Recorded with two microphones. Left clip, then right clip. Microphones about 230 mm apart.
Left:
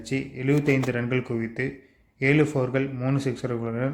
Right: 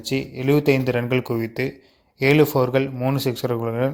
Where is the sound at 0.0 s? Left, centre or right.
Right.